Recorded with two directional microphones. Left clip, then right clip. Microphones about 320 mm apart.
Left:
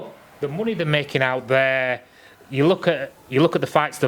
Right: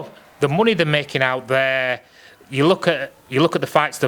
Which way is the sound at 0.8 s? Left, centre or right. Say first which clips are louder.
Right 2 dB; centre.